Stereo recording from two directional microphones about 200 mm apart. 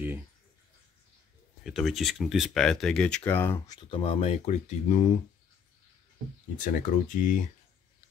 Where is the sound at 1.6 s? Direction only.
Centre (ahead or behind).